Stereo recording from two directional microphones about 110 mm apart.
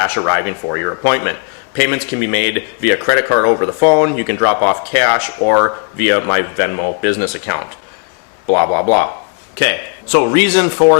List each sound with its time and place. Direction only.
0.0 s speech: 20° left (ahead or behind)
9.6 s speech: 15° left (ahead or behind)